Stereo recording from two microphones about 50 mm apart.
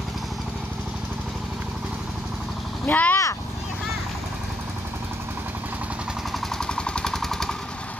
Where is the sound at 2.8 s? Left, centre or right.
Left.